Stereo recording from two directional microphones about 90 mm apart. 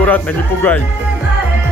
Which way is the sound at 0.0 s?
20° left (ahead or behind).